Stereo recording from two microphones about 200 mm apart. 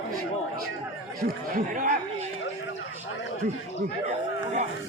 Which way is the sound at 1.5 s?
40° right (ahead or behind).